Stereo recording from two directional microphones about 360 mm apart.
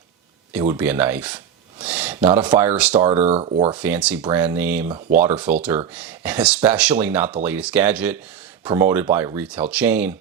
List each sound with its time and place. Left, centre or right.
0.5 s speech: centre
3.1 s speech: centre
3.8 s speech: centre